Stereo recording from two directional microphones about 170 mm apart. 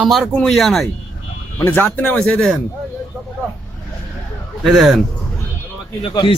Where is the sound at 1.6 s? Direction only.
10° left (ahead or behind).